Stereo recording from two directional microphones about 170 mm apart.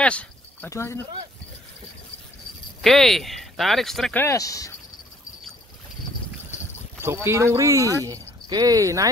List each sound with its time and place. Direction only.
0.0 s a sound: 5° left (ahead or behind)
0.7 s speech: 15° left (ahead or behind)
2.8 s speech: centre (ahead or behind); by 4.7 s 20° left (ahead or behind)
7.0 s speech: 15° right (ahead or behind)